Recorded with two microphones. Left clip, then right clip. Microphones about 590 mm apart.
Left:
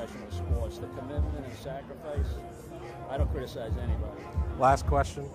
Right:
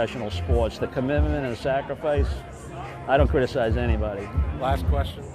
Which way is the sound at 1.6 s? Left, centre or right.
Right.